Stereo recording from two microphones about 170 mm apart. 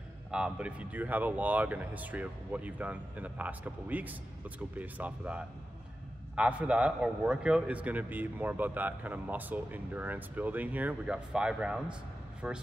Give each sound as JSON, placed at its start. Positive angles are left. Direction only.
{"t": 0.3, "sound": "a man's voice", "side_deg": -5}